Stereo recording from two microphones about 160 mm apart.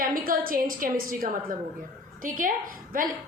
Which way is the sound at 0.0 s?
65° right (ahead or behind).